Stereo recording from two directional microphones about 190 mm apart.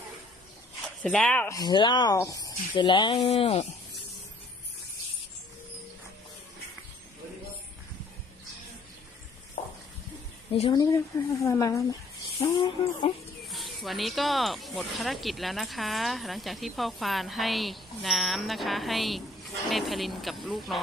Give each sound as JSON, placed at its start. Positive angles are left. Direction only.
{"t": 0.8, "sound": "speech", "side_deg": 5}
{"t": 10.5, "sound": "speech", "side_deg": 25}
{"t": 11.4, "sound": "speech", "side_deg": 15}
{"t": 12.4, "sound": "speech", "side_deg": 25}
{"t": 13.5, "sound": "speech", "side_deg": 0}